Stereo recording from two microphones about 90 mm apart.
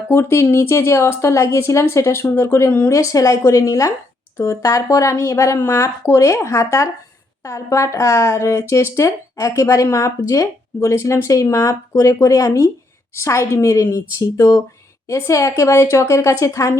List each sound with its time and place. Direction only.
0.1 s speech: 30° left (ahead or behind)
3.0 s speech: 35° left (ahead or behind)